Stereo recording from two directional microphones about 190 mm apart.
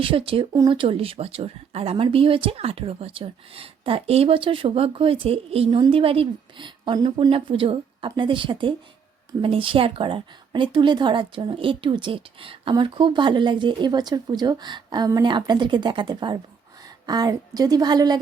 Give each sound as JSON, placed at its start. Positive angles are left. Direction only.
{"t": 0.0, "sound": "a woman's voice", "side_deg": -30}